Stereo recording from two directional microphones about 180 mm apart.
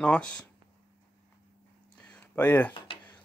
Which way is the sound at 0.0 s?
5° left (ahead or behind).